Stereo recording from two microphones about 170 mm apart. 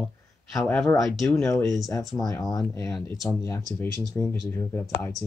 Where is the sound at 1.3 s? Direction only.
20° left (ahead or behind).